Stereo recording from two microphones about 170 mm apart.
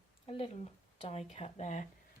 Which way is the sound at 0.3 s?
35° left (ahead or behind).